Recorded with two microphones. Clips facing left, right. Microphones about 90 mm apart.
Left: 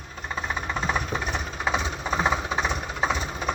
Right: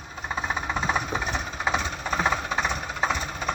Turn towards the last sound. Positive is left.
turn(degrees=5)  # may be behind; listen again after turning